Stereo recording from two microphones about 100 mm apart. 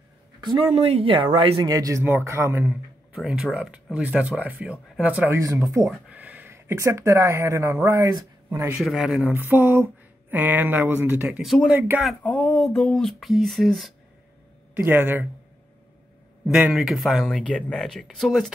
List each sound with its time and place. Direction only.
0.7 s speech: 75° right (ahead or behind)
1.7 s speech: 35° right (ahead or behind)
2.0 s speech: 25° right (ahead or behind)
3.2 s speech: 5° right (ahead or behind)
5.3 s speech: 35° right (ahead or behind)
5.9 s speech: 15° right (ahead or behind); by 8.6 s 35° right (ahead or behind)
8.8 s speech: 5° right (ahead or behind)
9.2 s speech: 20° right (ahead or behind)
11.4 s speech: centre (ahead or behind)
12.2 s speech: 10° left (ahead or behind)
14.7 s speech: 20° right (ahead or behind)
16.4 s speech: centre (ahead or behind)